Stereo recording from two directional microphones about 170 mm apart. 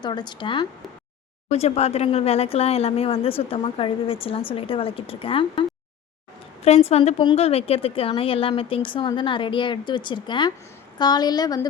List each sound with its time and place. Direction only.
0.0 s speech: 25° left (ahead or behind)
1.5 s speech: 40° left (ahead or behind)
6.7 s speech: 40° left (ahead or behind); by 11.7 s 20° left (ahead or behind)